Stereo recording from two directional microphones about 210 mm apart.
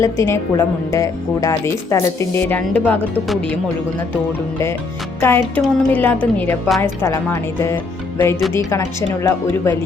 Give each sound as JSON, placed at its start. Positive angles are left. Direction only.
{"t": 0.0, "sound": "speech", "side_deg": 15}
{"t": 5.2, "sound": "speech", "side_deg": 10}